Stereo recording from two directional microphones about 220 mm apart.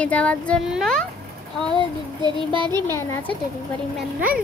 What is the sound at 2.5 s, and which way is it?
Speech, 20° right (ahead or behind).